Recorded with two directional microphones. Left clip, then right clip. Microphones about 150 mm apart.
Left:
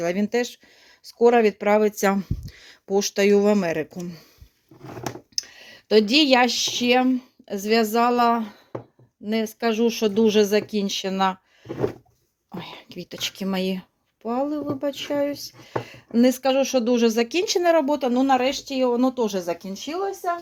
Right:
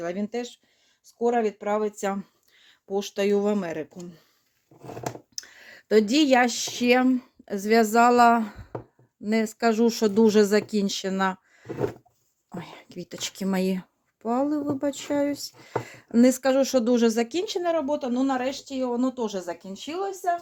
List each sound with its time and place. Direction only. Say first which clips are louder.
0.0 s speech: left 6 dB; 25° left (ahead or behind)
0.3 s speech: left 8 dB; 45° left (ahead or behind)
1.2 s speech: left 7 dB; 70° left (ahead or behind); by 3.8 s 25° left (ahead or behind)
5.3 s a sound: left 9 dB; 5° left (ahead or behind)
5.5 s speech: left 2 dB; 10° right (ahead or behind)
17.6 s speech: left 6 dB; 40° left (ahead or behind); by 20.1 s 20° left (ahead or behind)